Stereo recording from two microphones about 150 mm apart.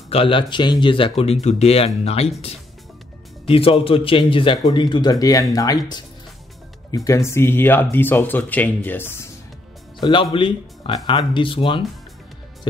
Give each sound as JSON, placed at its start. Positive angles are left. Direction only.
{"t": 0.1, "sound": "a man's voice", "side_deg": 35}
{"t": 7.1, "sound": "speech", "side_deg": 20}
{"t": 9.9, "sound": "a man's voice", "side_deg": 30}